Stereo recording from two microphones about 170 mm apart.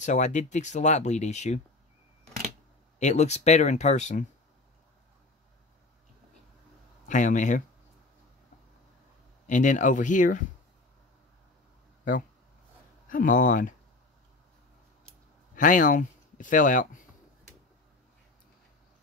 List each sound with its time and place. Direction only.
0.0 s speech: 45° left (ahead or behind)
3.0 s speech: 40° left (ahead or behind)
7.1 s speech: 50° left (ahead or behind)
9.5 s speech: 45° left (ahead or behind)
12.0 s speech: 55° left (ahead or behind)
15.5 s speech: 50° left (ahead or behind)